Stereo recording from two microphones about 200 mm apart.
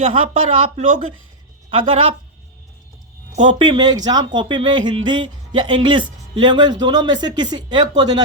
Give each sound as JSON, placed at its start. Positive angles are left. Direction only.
{"t": 0.0, "sound": "speech", "side_deg": -30}
{"t": 3.3, "sound": "speech", "side_deg": -35}
{"t": 3.6, "sound": "speech", "side_deg": -20}